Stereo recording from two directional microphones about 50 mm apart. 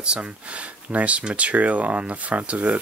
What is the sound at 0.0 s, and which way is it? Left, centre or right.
Speech, right.